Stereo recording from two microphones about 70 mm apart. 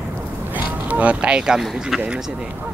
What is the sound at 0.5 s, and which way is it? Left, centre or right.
Speech, right.